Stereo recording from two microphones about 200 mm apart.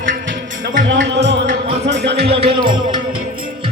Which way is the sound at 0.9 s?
60° right (ahead or behind).